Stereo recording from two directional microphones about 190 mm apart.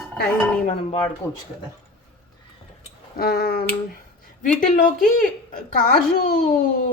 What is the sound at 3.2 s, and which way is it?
Speech, 55° left (ahead or behind).